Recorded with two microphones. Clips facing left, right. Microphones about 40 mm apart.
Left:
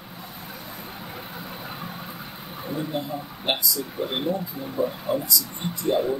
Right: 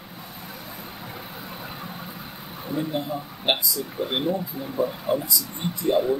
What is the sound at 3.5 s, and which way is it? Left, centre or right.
Speech, right.